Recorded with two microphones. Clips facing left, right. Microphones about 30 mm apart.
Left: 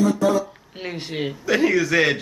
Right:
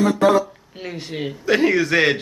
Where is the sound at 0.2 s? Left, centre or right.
Right.